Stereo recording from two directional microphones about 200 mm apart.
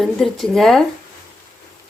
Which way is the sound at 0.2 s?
Centre (ahead or behind).